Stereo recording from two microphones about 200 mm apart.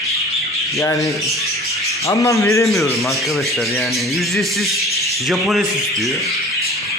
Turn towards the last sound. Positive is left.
turn(degrees=0)  # may be behind; listen again after turning